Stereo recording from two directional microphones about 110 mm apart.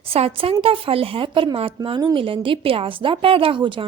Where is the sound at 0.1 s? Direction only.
60° right (ahead or behind).